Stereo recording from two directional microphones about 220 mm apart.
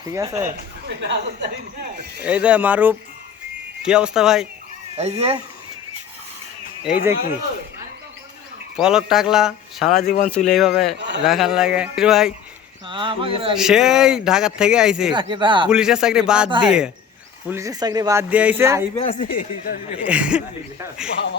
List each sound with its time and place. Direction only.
0.0 s speech: 15° right (ahead or behind)
0.9 s a woman's voice: 50° right (ahead or behind)
2.2 s speech: 5° right (ahead or behind)
4.9 s speech: 30° right (ahead or behind)
6.8 s speech: 10° right (ahead or behind)
8.7 s speech: 5° right (ahead or behind)
12.9 s speech: 25° right (ahead or behind)
13.6 s speech: centre (ahead or behind)
15.1 s speech: 20° right (ahead or behind)
15.7 s speech: 5° right (ahead or behind)
17.5 s speech: 15° right (ahead or behind)
18.9 s speech: 30° left (ahead or behind)
19.3 s speech: 40° left (ahead or behind)
20.1 s speech: 5° right (ahead or behind)